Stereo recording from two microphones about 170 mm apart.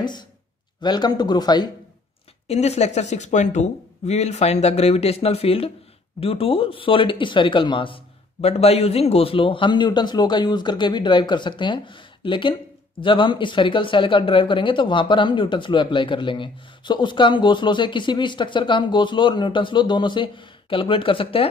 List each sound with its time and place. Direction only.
0.7 s speech: 25° left (ahead or behind)
2.4 s speech: 40° left (ahead or behind)